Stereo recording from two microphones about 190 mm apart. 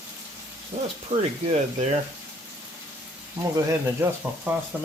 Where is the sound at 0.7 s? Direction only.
30° right (ahead or behind).